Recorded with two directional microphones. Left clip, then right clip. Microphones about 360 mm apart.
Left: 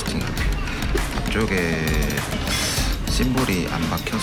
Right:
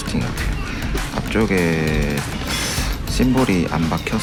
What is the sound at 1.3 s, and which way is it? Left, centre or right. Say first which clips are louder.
Speech: right 4 dB; centre.